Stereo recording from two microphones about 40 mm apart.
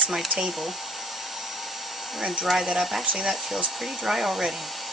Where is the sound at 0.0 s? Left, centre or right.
Centre.